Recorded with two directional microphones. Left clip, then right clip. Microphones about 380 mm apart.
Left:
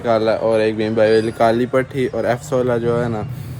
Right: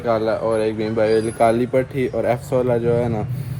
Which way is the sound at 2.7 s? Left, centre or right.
Centre.